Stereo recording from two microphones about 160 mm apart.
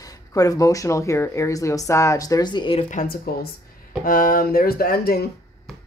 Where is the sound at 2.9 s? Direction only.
65° left (ahead or behind).